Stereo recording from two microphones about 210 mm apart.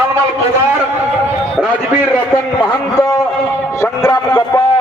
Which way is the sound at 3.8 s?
20° left (ahead or behind).